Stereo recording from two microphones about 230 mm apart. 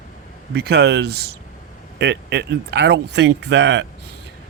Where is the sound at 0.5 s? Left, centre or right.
Right.